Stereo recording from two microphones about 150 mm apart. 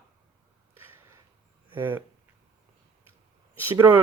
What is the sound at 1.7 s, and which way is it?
Speech, 15° right (ahead or behind).